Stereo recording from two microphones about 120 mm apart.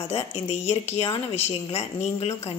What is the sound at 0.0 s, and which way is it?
A woman's voice, 55° left (ahead or behind).